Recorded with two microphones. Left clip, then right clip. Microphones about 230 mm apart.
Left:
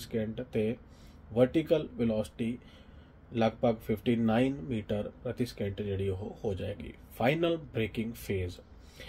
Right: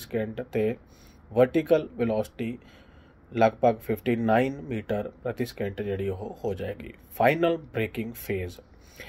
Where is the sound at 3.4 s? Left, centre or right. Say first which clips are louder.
Right 7 dB; centre.